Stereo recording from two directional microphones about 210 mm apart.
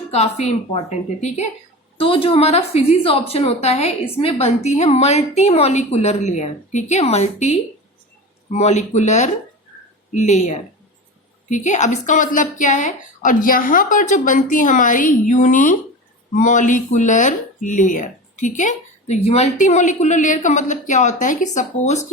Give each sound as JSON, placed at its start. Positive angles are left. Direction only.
{"t": 0.1, "sound": "speech", "side_deg": 30}